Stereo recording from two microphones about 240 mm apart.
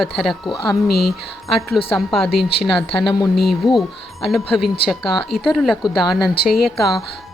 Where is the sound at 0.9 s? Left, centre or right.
Left.